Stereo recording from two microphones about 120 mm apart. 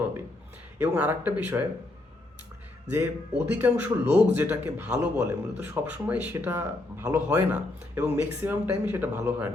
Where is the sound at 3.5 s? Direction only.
15° right (ahead or behind).